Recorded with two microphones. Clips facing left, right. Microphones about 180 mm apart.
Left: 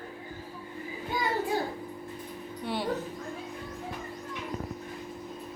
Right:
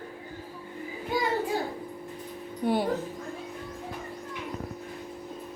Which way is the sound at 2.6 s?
50° right (ahead or behind).